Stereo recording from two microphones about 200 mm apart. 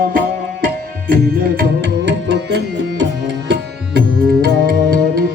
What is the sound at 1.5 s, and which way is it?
Tabla, 55° right (ahead or behind).